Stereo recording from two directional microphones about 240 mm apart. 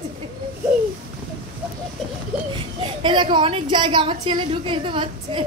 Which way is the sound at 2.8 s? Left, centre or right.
Centre.